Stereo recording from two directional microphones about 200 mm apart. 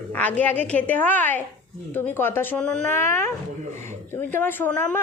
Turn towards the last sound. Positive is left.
turn(degrees=10)  # may be behind; listen again after turning